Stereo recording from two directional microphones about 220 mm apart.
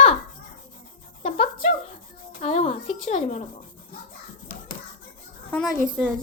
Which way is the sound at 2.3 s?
30° left (ahead or behind).